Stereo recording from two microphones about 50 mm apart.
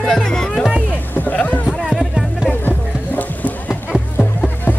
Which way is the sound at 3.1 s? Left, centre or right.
Left.